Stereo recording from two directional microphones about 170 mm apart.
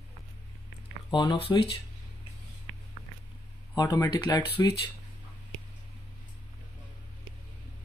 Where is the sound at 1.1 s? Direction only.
25° left (ahead or behind).